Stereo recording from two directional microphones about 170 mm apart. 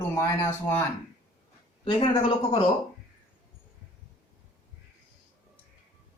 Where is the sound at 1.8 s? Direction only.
30° left (ahead or behind).